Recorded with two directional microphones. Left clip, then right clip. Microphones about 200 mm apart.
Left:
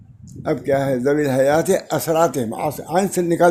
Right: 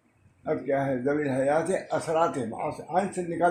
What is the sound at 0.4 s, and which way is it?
Speech, 50° left (ahead or behind).